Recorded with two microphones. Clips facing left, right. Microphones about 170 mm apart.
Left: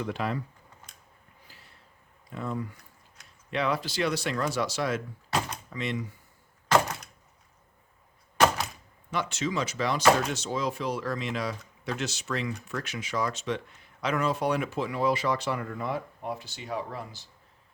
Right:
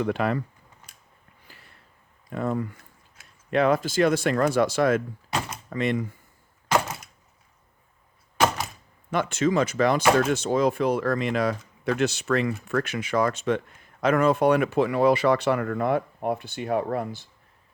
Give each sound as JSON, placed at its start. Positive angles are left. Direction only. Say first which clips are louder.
{"t": 0.0, "sound": "speech", "louder": "right 6 dB", "side_deg": -60}
{"t": 1.5, "sound": "a sound", "louder": "right 5 dB", "side_deg": -55}
{"t": 2.3, "sound": "speech", "louder": "right 6 dB", "side_deg": -55}
{"t": 6.7, "sound": "a sound", "louder": "even", "side_deg": -5}
{"t": 8.4, "sound": "door", "louder": "even", "side_deg": -5}
{"t": 9.0, "sound": "speech", "louder": "right 7 dB", "side_deg": -55}